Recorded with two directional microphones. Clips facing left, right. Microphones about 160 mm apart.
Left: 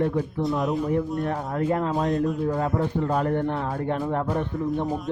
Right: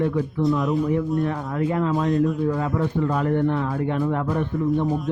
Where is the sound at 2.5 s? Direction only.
40° left (ahead or behind).